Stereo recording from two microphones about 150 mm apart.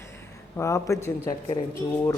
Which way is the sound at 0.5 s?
20° left (ahead or behind).